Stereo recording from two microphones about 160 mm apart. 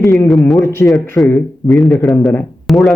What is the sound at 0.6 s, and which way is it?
A man's voice, 15° left (ahead or behind).